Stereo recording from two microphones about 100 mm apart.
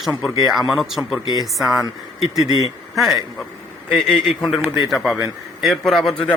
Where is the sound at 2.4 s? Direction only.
40° right (ahead or behind).